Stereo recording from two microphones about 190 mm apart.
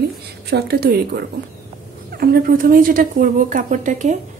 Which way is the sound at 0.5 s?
60° right (ahead or behind).